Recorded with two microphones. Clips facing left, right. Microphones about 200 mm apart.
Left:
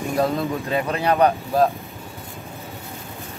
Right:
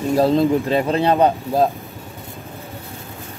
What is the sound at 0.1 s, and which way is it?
Speech, 30° right (ahead or behind).